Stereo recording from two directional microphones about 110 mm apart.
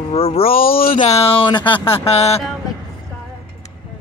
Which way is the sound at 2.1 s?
75° left (ahead or behind).